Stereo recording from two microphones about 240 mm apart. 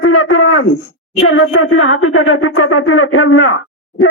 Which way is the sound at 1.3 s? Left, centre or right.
Left.